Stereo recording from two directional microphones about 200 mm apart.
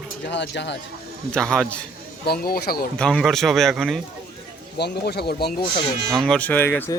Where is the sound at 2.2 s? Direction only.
50° left (ahead or behind).